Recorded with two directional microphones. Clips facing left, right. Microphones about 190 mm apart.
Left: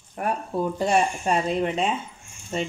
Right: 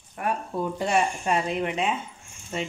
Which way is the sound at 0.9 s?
35° left (ahead or behind).